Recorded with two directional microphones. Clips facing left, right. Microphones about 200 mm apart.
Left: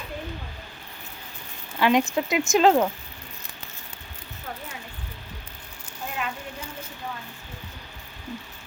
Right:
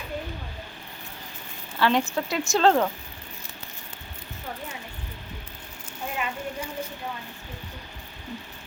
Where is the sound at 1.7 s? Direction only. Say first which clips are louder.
Left 2 dB; 15° left (ahead or behind).